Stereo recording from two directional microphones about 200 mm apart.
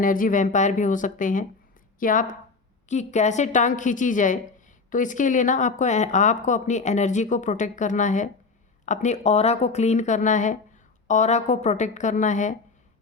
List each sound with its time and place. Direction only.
0.0 s speech: 45° left (ahead or behind)